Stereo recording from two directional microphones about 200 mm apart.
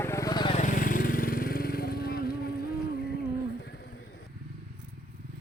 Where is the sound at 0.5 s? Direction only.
40° left (ahead or behind).